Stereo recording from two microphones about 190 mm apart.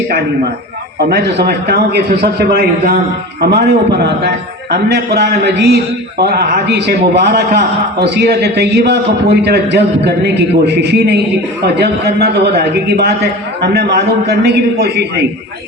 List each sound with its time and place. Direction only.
0.9 s a man's voice: 60° right (ahead or behind)